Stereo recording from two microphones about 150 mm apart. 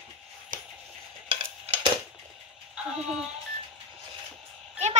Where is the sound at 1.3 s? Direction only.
40° right (ahead or behind).